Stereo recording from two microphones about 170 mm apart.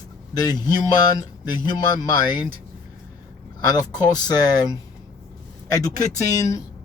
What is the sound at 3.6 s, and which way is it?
Speech, 25° left (ahead or behind).